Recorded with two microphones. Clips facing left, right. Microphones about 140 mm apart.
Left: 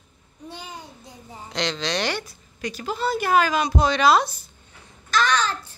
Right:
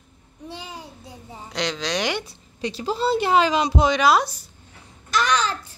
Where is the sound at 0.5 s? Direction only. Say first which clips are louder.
Right 1 dB; 5° right (ahead or behind).